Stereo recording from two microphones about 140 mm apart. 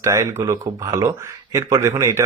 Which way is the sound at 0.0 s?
20° right (ahead or behind).